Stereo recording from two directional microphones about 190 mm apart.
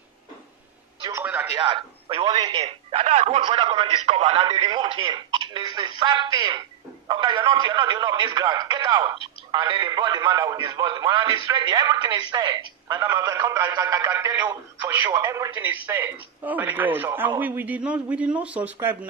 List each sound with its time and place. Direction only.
1.0 s a sound: 10° right (ahead or behind)
1.6 s speech: 30° right (ahead or behind)
2.6 s a man's voice: 30° right (ahead or behind); by 18.9 s 10° right (ahead or behind)